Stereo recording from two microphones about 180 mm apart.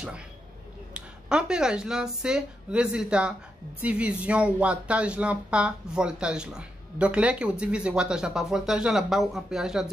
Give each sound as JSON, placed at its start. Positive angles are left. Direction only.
{"t": 0.9, "sound": "speech", "side_deg": -5}